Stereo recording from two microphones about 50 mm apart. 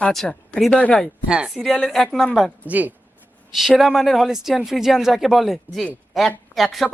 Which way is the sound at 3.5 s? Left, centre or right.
Centre.